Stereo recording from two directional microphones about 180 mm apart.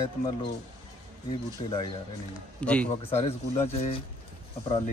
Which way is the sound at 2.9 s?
35° left (ahead or behind).